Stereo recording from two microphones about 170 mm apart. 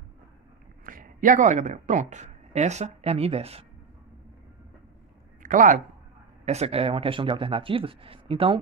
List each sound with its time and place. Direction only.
0.8 s speech: 55° right (ahead or behind); by 3.6 s 35° right (ahead or behind)
5.4 s speech: 50° right (ahead or behind)
6.4 s speech: 40° right (ahead or behind)